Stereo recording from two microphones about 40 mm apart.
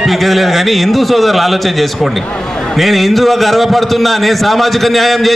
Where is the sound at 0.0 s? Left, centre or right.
Centre.